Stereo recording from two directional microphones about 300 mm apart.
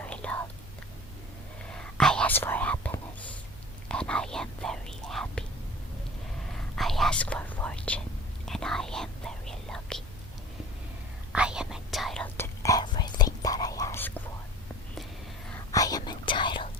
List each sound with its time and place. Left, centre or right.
0.0 s whispering: centre
1.7 s whispering: centre
6.7 s whispering: centre
11.3 s whispering: centre
15.7 s whispering: centre